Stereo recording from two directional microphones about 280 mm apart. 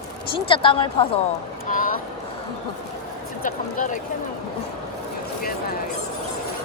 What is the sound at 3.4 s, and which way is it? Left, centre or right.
Speech, left.